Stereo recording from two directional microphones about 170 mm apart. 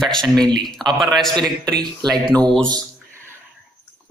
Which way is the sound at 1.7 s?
25° right (ahead or behind).